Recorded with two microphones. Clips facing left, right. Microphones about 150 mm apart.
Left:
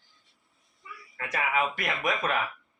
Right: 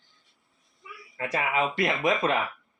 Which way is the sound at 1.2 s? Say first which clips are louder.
Right 2 dB; 30° right (ahead or behind).